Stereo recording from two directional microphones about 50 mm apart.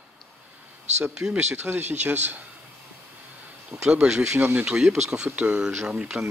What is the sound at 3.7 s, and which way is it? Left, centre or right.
Speech, centre.